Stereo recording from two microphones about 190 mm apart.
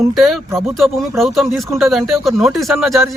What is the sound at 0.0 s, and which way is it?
A man's voice, centre (ahead or behind).